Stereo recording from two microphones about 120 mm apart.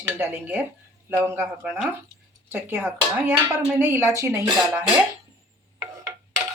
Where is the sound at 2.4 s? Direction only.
15° right (ahead or behind).